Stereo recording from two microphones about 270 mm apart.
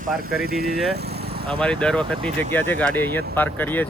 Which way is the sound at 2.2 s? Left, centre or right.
Right.